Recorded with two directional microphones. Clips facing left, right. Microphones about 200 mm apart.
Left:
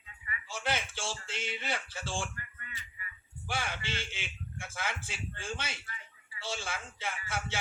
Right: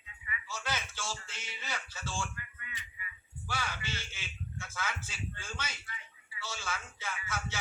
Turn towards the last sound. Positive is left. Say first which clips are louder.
# left 2 dB
turn(degrees=30)  # may be behind; listen again after turning